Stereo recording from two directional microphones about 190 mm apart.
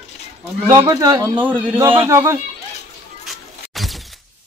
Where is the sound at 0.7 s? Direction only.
20° right (ahead or behind).